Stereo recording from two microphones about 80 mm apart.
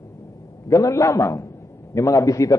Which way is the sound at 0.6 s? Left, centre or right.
Left.